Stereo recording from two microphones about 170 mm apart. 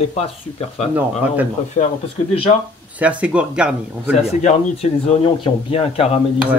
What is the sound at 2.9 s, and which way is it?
Speech, 10° right (ahead or behind).